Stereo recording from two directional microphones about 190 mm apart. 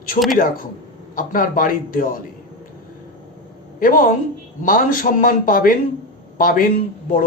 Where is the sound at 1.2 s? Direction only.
45° left (ahead or behind).